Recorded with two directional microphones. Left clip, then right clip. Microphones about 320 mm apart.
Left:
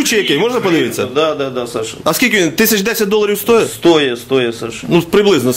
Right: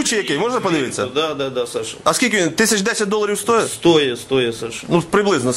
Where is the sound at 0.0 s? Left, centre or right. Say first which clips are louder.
Left 6 dB; centre.